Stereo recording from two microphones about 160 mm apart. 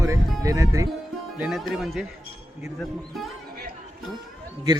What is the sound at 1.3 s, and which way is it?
Speech, 5° right (ahead or behind).